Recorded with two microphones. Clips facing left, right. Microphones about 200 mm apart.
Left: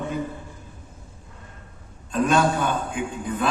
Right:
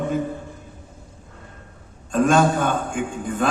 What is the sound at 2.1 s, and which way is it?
A man's voice, 45° right (ahead or behind).